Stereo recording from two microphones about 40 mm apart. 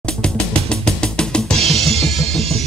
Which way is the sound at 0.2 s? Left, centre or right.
Left.